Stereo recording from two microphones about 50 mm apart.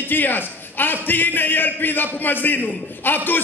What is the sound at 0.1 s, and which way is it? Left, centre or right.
A man's voice, left.